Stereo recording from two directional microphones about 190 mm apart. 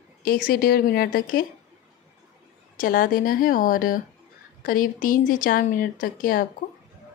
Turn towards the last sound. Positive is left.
turn(degrees=45)  # may be behind; listen again after turning